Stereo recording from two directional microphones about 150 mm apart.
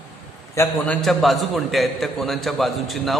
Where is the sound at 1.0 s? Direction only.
Centre (ahead or behind).